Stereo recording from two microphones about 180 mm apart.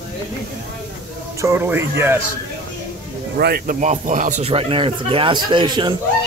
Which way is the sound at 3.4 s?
60° right (ahead or behind).